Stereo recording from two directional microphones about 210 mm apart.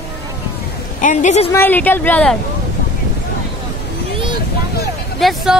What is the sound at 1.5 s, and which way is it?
Speech, 10° left (ahead or behind).